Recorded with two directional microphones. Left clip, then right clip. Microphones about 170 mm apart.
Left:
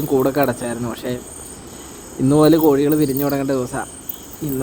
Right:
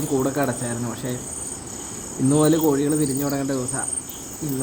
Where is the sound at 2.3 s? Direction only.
55° left (ahead or behind).